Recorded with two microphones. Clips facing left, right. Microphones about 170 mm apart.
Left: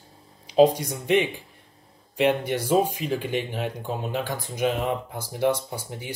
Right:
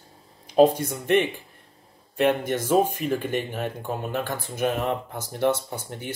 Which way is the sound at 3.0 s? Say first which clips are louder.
Right 2 dB; 55° right (ahead or behind).